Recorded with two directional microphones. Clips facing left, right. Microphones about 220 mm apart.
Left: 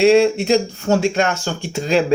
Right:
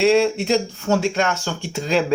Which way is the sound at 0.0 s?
15° left (ahead or behind).